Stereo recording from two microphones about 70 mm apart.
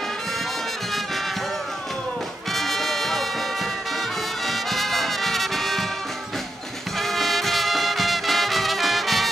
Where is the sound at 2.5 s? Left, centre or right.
Centre.